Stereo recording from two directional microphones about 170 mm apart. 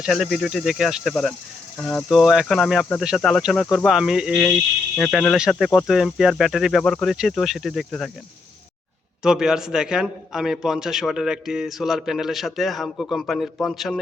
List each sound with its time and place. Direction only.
0.0 s speech: centre (ahead or behind)
1.8 s insect: 10° left (ahead or behind)
2.0 s speech: centre (ahead or behind)
9.2 s speech: 5° right (ahead or behind)